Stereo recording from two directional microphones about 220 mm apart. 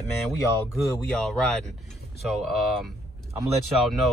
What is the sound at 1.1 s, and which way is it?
Speech, 5° left (ahead or behind).